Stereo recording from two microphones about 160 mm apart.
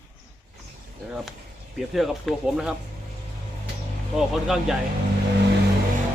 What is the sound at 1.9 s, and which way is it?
Speech, centre (ahead or behind).